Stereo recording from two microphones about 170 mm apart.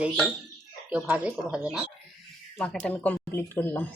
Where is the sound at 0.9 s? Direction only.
10° right (ahead or behind).